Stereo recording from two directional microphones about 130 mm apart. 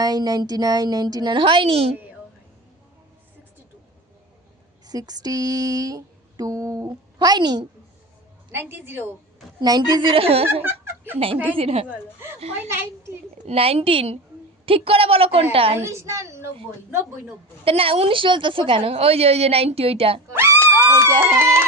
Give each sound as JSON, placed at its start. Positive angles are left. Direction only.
{"t": 0.0, "sound": "a woman's voice", "side_deg": -30}
{"t": 4.9, "sound": "a sound", "side_deg": -30}
{"t": 8.5, "sound": "a woman's voice", "side_deg": -15}
{"t": 9.6, "sound": "a woman's voice", "side_deg": -30}
{"t": 10.5, "sound": "giggle", "side_deg": -20}
{"t": 11.5, "sound": "speech", "side_deg": -50}
{"t": 12.6, "sound": "a sound", "side_deg": -20}
{"t": 13.4, "sound": "speech", "side_deg": -50}
{"t": 15.8, "sound": "a sound", "side_deg": -20}
{"t": 17.7, "sound": "speech", "side_deg": -45}
{"t": 20.3, "sound": "speech", "side_deg": -20}